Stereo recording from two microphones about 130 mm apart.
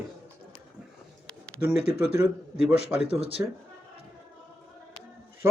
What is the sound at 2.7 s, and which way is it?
Speech, 55° left (ahead or behind).